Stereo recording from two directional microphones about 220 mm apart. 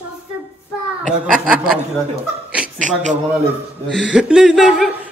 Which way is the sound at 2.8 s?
35° right (ahead or behind).